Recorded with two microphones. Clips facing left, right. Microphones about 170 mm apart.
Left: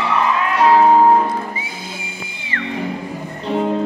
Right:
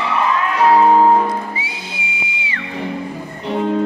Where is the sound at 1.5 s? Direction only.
45° left (ahead or behind).